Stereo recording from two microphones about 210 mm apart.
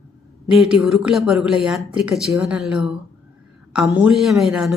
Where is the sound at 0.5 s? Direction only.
Centre (ahead or behind).